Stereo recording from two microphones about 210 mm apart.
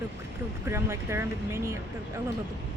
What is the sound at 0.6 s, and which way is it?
Speech, 10° right (ahead or behind).